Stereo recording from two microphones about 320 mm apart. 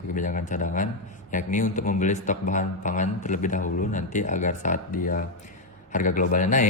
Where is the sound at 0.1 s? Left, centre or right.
Left.